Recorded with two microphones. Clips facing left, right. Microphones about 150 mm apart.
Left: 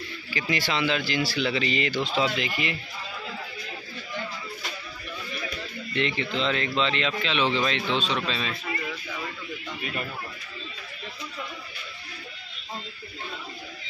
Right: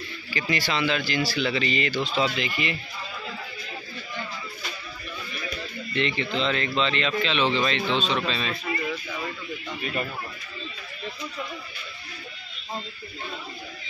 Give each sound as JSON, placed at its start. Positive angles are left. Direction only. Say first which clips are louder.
{"t": 0.3, "sound": "speech", "louder": "right 1 dB", "side_deg": 15}
{"t": 2.3, "sound": "a man's voice", "louder": "right 1 dB", "side_deg": 5}
{"t": 5.9, "sound": "speech", "louder": "right 1 dB", "side_deg": 10}